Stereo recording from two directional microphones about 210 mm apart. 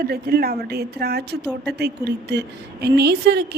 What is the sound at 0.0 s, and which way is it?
A woman's voice, 50° right (ahead or behind).